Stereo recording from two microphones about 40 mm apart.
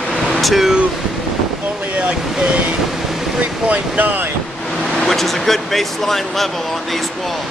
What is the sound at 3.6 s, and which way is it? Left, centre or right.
Speech, right.